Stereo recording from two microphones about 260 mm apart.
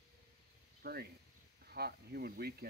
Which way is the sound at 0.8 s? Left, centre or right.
Right.